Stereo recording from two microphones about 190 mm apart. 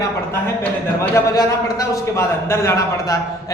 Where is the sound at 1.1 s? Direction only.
15° left (ahead or behind).